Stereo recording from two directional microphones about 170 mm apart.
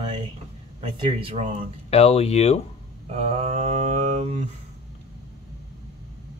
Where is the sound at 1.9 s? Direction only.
35° left (ahead or behind).